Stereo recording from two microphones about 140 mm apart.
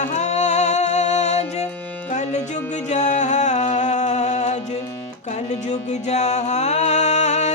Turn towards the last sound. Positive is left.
turn(degrees=55)  # may be behind; listen again after turning